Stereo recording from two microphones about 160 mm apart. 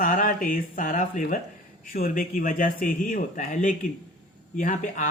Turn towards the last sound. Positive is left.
turn(degrees=55)  # may be behind; listen again after turning